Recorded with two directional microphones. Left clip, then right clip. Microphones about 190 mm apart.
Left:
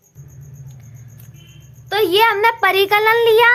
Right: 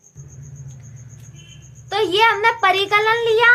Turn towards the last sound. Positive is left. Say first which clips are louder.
# left 3 dB
turn(degrees=35)  # may be behind; listen again after turning